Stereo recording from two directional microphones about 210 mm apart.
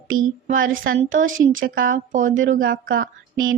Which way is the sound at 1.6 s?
40° right (ahead or behind).